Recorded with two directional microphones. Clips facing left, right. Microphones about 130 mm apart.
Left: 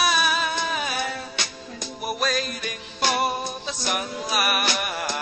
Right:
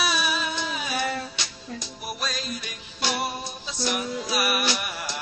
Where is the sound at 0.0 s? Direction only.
50° left (ahead or behind).